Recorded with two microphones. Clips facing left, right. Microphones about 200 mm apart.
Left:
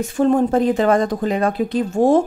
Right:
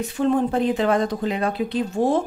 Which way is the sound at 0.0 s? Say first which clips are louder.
Left 4 dB; 45° left (ahead or behind).